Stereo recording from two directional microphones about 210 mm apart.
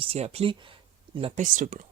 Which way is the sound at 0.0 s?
30° right (ahead or behind).